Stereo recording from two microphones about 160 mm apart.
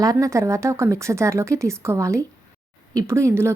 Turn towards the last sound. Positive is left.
turn(degrees=-15)  # may be behind; listen again after turning